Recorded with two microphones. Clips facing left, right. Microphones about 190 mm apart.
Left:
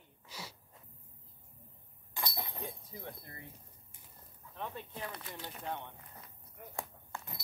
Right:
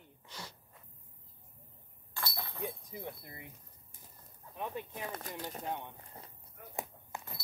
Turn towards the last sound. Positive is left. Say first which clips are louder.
# right 1 dB
turn(degrees=-20)  # may be behind; listen again after turning